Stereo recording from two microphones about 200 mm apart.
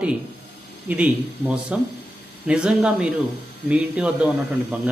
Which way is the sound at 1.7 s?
5° right (ahead or behind).